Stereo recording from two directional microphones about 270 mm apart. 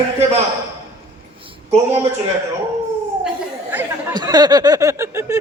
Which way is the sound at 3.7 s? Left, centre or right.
Centre.